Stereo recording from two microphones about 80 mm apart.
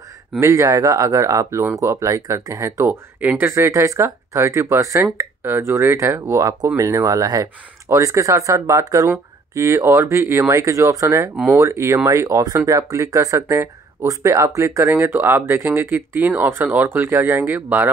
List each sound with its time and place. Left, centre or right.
0.4 s speech: right
3.2 s speech: right
3.4 s speech: right
15.0 s speech: right